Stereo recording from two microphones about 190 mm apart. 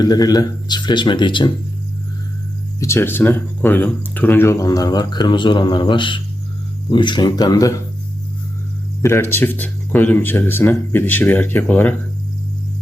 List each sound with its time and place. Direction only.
0.0 s speech: 20° left (ahead or behind)
2.8 s speech: 15° left (ahead or behind)
9.0 s speech: 15° left (ahead or behind)